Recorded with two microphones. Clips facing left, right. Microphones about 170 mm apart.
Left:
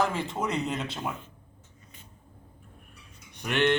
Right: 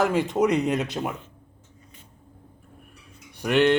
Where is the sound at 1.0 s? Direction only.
40° right (ahead or behind).